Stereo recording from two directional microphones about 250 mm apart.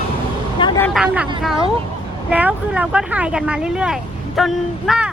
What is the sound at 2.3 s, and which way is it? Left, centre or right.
Speech, centre.